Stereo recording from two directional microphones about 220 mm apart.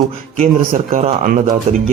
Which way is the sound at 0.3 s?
40° right (ahead or behind).